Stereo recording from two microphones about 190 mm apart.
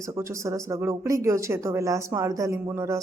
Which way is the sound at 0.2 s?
15° right (ahead or behind).